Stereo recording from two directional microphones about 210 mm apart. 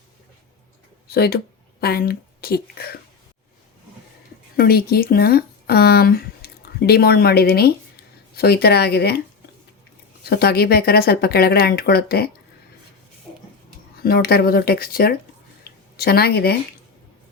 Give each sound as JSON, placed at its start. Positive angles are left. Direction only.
{"t": 1.0, "sound": "speech", "side_deg": 45}
{"t": 4.5, "sound": "speech", "side_deg": 45}
{"t": 10.2, "sound": "speech", "side_deg": 50}
{"t": 13.9, "sound": "speech", "side_deg": 45}